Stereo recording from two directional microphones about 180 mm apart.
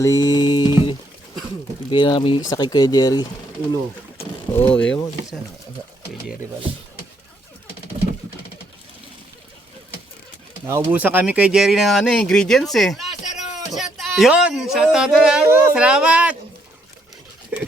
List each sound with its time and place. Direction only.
0.0 s music: 20° left (ahead or behind)
1.9 s speech: 25° left (ahead or behind)
4.5 s mechanisms: 15° left (ahead or behind)
10.7 s speech: 10° right (ahead or behind)
13.7 s a sound: centre (ahead or behind)
14.9 s speech: 5° right (ahead or behind)
17.5 s a sound: 10° right (ahead or behind)